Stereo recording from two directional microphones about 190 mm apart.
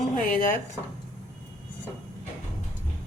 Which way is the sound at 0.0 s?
45° left (ahead or behind).